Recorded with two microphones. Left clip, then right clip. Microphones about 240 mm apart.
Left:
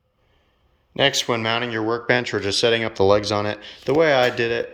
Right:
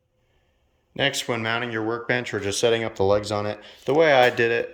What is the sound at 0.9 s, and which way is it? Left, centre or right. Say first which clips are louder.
Speech: left 5 dB; centre.